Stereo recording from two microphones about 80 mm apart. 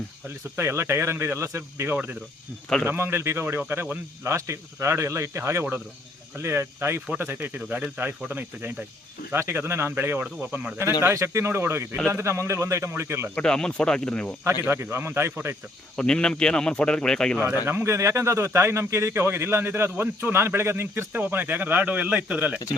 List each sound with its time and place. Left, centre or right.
0.5 s a man's voice: right
13.3 s speech: centre
14.6 s a man's voice: right
16.0 s speech: centre
17.7 s a man's voice: right; by 22.5 s centre